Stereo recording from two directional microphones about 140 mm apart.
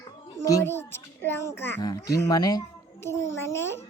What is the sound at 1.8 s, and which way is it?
A child's voice, 25° left (ahead or behind).